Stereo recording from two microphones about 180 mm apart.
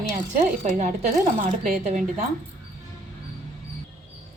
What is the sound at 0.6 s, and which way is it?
Speech, 45° right (ahead or behind).